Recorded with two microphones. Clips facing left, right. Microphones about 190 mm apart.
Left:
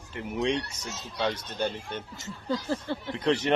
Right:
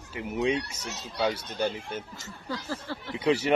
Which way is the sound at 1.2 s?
10° right (ahead or behind).